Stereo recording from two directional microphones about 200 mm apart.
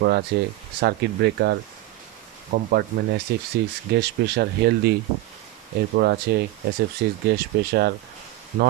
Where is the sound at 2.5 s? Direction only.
60° right (ahead or behind).